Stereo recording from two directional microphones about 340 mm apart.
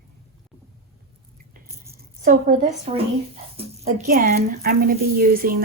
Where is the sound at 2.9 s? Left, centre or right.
Centre.